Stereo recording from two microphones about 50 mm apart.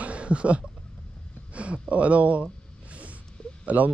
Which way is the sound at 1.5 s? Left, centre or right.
Right.